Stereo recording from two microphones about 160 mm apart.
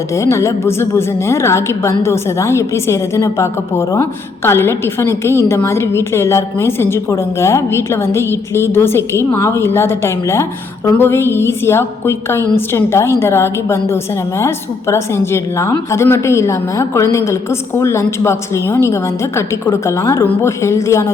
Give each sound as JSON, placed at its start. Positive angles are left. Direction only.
{"t": 0.2, "sound": "a woman's voice", "side_deg": 20}